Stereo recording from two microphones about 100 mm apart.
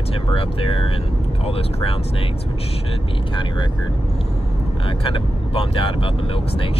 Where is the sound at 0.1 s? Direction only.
70° left (ahead or behind).